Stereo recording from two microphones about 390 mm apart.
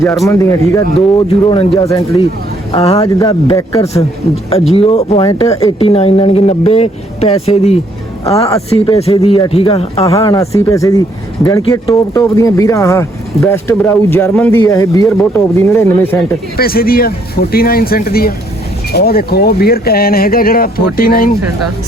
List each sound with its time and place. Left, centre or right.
0.0 s speech: centre
16.6 s speech: left